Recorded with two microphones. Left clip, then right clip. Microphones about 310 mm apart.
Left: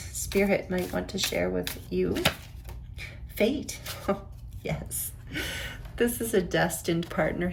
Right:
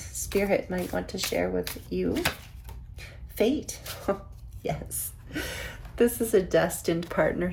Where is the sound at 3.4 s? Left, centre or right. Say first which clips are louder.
Right 1 dB; centre.